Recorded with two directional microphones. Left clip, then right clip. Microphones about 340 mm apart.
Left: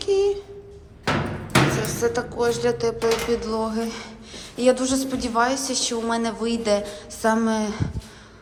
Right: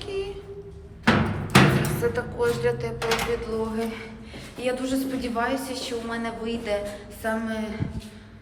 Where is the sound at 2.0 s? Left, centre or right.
Centre.